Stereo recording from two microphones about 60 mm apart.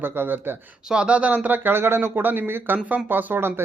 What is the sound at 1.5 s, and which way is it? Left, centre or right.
Speech, right.